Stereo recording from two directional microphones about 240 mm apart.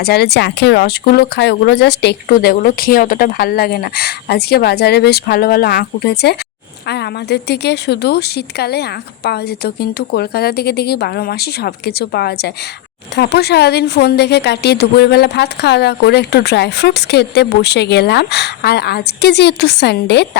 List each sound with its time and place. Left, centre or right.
0.0 s a woman's voice: left